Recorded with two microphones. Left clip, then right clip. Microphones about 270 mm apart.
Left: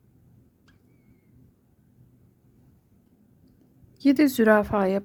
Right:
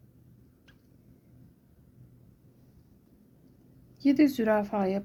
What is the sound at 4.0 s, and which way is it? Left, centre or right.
Speech, centre.